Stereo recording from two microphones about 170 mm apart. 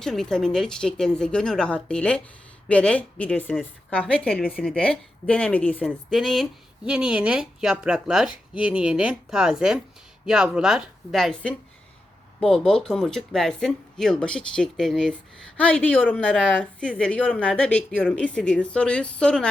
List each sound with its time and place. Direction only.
0.0 s a woman's voice: 5° left (ahead or behind)